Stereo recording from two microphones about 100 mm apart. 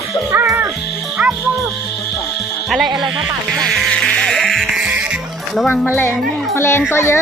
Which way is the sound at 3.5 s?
5° left (ahead or behind).